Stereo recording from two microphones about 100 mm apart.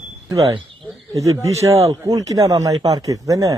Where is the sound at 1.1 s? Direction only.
35° right (ahead or behind).